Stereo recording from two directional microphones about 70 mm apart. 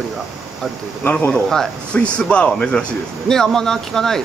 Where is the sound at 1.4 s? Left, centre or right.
Centre.